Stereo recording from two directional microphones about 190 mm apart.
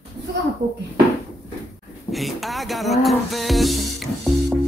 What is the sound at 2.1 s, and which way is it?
Music, centre (ahead or behind).